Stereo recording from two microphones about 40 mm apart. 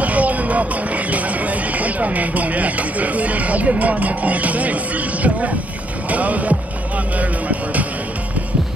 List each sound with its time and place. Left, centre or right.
0.0 s speech: right